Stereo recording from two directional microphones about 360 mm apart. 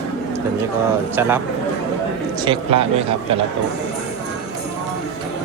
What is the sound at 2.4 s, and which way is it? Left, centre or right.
Speech, centre.